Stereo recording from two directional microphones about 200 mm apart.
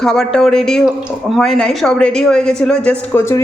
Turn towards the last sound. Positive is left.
turn(degrees=15)  # may be behind; listen again after turning